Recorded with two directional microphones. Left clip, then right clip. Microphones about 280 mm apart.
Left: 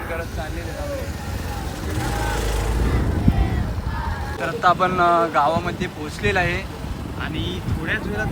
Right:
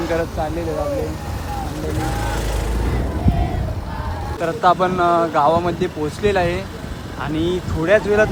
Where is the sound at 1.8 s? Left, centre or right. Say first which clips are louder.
Even; centre.